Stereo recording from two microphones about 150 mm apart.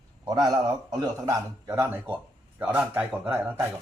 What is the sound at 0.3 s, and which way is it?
A man's voice, 25° right (ahead or behind).